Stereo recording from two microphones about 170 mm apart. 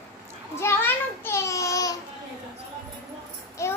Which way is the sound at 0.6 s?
15° left (ahead or behind).